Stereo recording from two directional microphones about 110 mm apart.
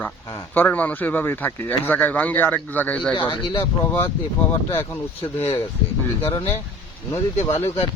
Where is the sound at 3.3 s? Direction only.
55° left (ahead or behind).